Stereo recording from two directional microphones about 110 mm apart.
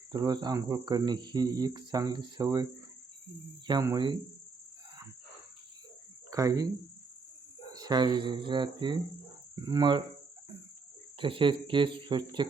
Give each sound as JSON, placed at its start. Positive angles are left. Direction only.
{"t": 0.1, "sound": "speech", "side_deg": -40}
{"t": 3.9, "sound": "speech", "side_deg": -45}
{"t": 6.3, "sound": "speech", "side_deg": -30}
{"t": 7.7, "sound": "speech", "side_deg": -40}
{"t": 11.2, "sound": "speech", "side_deg": -50}